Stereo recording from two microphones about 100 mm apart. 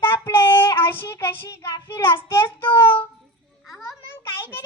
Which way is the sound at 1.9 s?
25° left (ahead or behind).